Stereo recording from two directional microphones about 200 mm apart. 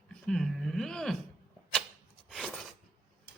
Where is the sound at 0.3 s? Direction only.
Centre (ahead or behind).